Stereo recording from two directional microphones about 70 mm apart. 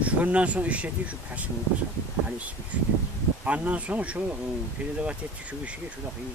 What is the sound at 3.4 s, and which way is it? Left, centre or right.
Speech, centre.